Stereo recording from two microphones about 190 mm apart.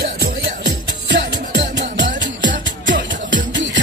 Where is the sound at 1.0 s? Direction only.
70° right (ahead or behind).